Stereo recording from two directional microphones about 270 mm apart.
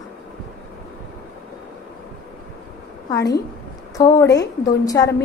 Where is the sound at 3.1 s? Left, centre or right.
Centre.